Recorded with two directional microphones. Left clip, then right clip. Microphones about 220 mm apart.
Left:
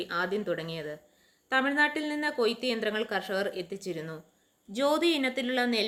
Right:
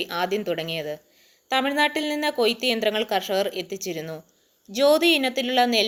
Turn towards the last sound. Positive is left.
turn(degrees=-10)  # may be behind; listen again after turning